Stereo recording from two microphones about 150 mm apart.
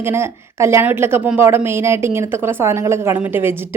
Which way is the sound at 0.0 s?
15° right (ahead or behind).